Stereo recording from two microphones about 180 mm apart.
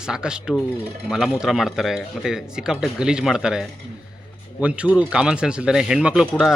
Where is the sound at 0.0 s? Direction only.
5° right (ahead or behind).